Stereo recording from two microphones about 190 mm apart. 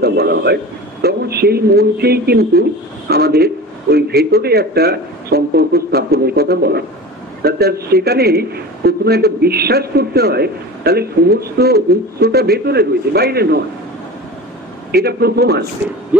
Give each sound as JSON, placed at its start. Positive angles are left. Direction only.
{"t": 0.0, "sound": "a man's voice", "side_deg": -55}
{"t": 14.9, "sound": "a man's voice", "side_deg": -55}